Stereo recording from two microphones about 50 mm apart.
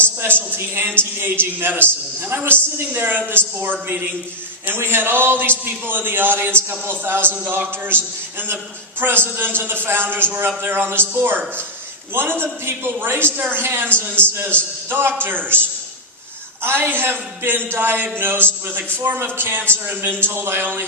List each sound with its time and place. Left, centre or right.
0.0 s a man's voice: right
12.1 s a man's voice: right
14.2 s a man's voice: left
14.8 s a man's voice: right
16.6 s a man's voice: right